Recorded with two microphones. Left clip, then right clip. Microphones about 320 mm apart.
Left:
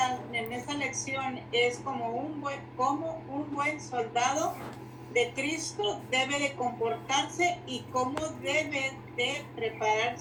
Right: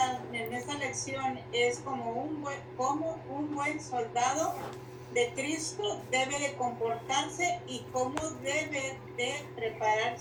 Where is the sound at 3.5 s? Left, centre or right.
Left.